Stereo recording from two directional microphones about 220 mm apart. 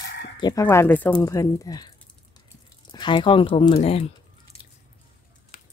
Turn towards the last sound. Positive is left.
turn(degrees=25)  # may be behind; listen again after turning